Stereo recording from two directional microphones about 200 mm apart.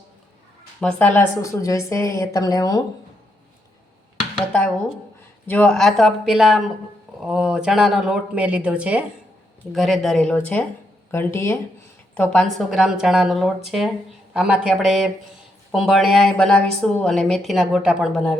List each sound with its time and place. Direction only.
0.8 s a woman's voice: 10° left (ahead or behind)
4.4 s a woman's voice: 5° left (ahead or behind)